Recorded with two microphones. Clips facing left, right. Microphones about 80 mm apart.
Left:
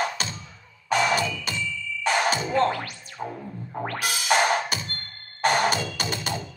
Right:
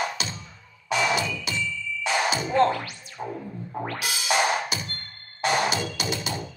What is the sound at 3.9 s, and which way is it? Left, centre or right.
Music, left.